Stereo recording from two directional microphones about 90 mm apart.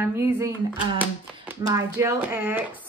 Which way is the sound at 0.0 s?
25° right (ahead or behind).